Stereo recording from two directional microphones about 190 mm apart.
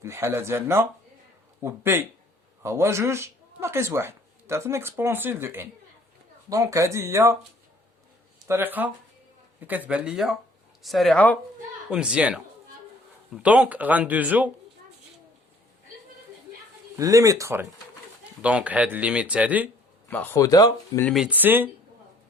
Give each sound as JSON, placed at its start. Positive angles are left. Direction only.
{"t": 0.0, "sound": "speech", "side_deg": -15}
{"t": 8.4, "sound": "speech", "side_deg": -10}
{"t": 11.9, "sound": "speech", "side_deg": -5}
{"t": 17.0, "sound": "speech", "side_deg": -15}
{"t": 20.1, "sound": "speech", "side_deg": 10}
{"t": 21.0, "sound": "speech", "side_deg": 0}